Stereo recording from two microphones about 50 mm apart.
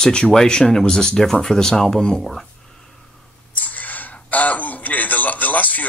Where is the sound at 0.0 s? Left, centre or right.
Centre.